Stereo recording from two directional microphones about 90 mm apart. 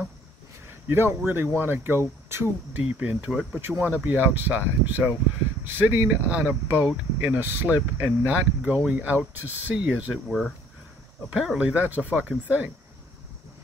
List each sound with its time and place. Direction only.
0.7 s speech: 25° right (ahead or behind)
3.7 s speech: centre (ahead or behind)
4.0 s speech: 20° right (ahead or behind)
11.3 s speech: 5° right (ahead or behind)
11.6 s speech: 20° right (ahead or behind)